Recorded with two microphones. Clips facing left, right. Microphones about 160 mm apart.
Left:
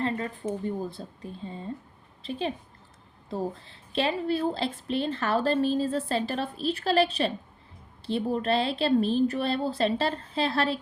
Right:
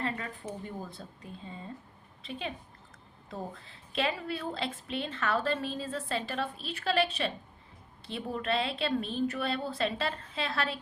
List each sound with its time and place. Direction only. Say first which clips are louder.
0.0 s a woman's voice: left 6 dB; 30° left (ahead or behind)
3.2 s a woman's voice: left 8 dB; 30° left (ahead or behind)